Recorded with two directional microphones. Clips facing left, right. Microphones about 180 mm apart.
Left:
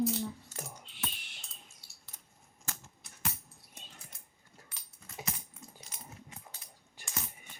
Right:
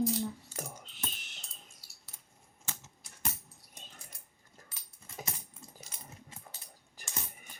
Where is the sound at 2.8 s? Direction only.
5° left (ahead or behind).